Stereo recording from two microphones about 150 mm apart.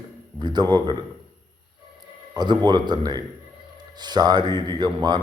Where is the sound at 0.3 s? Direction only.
30° right (ahead or behind).